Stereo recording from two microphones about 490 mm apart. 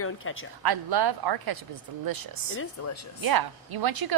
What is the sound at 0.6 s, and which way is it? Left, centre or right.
A woman's voice, right.